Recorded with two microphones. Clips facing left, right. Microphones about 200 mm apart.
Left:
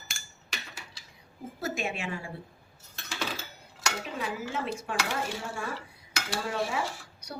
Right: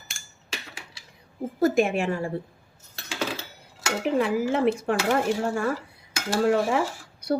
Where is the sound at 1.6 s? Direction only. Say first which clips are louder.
Right 12 dB; 55° right (ahead or behind).